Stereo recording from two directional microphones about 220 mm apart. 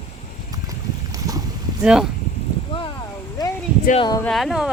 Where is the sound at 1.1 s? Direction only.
15° right (ahead or behind).